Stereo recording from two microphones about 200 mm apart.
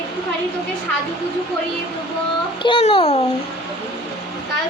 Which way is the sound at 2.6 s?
25° left (ahead or behind).